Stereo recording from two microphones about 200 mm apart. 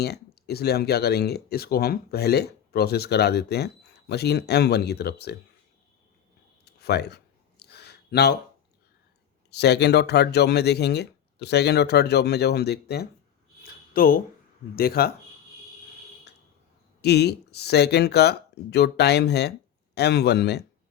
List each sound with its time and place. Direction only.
0.0 s speech: 55° left (ahead or behind)
6.7 s a sound: 55° left (ahead or behind)
9.5 s speech: 55° left (ahead or behind)
17.0 s speech: 55° left (ahead or behind)